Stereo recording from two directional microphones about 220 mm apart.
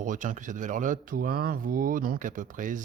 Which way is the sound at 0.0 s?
35° right (ahead or behind).